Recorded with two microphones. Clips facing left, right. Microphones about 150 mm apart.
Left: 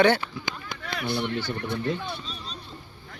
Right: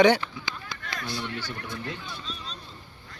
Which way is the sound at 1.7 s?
65° left (ahead or behind).